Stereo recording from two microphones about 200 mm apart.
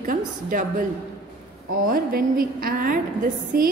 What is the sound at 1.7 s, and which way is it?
A woman's voice, 45° right (ahead or behind).